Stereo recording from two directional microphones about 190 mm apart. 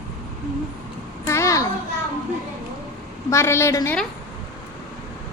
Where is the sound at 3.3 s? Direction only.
15° left (ahead or behind).